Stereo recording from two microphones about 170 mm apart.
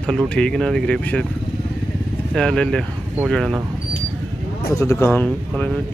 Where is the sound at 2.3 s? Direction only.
5° left (ahead or behind).